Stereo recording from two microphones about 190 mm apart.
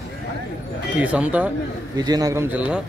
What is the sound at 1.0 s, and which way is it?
Speech, 5° right (ahead or behind).